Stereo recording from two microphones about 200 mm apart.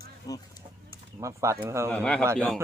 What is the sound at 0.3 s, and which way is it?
Chicken, 20° left (ahead or behind).